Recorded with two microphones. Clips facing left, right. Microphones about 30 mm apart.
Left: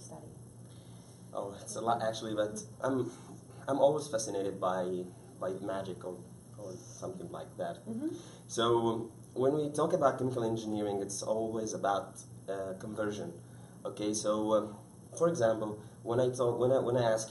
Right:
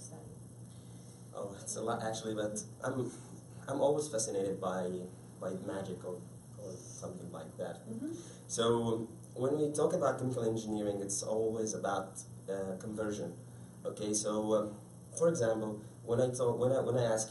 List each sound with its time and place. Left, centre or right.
1.3 s speech: centre